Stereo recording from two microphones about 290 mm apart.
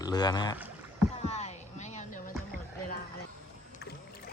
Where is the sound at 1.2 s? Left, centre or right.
Left.